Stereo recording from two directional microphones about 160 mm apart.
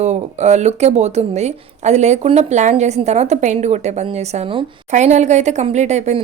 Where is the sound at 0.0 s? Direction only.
45° right (ahead or behind).